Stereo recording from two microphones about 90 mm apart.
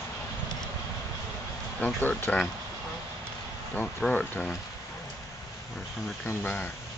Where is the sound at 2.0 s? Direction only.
20° left (ahead or behind).